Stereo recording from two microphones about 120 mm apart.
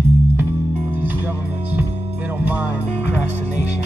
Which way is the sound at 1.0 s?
15° right (ahead or behind).